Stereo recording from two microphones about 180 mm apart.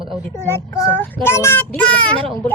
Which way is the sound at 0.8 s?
15° left (ahead or behind).